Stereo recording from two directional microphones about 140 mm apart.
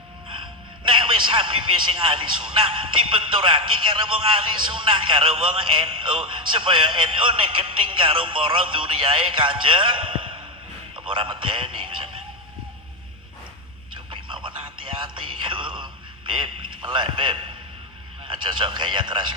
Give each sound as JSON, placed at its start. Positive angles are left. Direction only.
{"t": 0.8, "sound": "a man's voice", "side_deg": -35}
{"t": 14.1, "sound": "a sound", "side_deg": -35}
{"t": 18.2, "sound": "speech", "side_deg": -35}